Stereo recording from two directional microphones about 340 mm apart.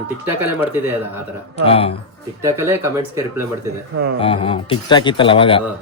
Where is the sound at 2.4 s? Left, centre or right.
Centre.